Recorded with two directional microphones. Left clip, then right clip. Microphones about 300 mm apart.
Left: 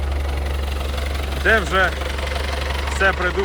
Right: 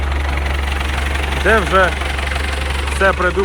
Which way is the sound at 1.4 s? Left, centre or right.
Centre.